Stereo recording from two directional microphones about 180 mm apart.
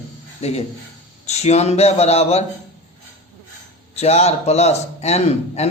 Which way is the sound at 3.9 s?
35° left (ahead or behind).